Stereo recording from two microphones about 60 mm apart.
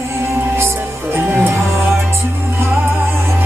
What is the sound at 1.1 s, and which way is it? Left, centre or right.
Music, right.